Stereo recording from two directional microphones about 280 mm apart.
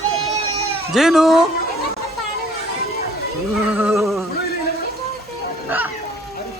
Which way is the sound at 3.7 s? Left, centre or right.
Centre.